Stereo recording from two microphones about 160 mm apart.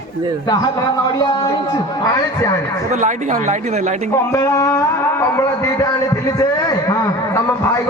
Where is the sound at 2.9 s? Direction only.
50° right (ahead or behind).